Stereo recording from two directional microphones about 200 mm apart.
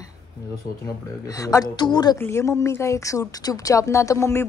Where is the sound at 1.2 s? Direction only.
15° left (ahead or behind).